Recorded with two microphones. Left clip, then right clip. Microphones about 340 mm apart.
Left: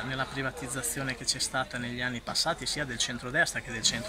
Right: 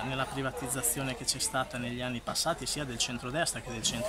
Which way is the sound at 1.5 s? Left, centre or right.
Centre.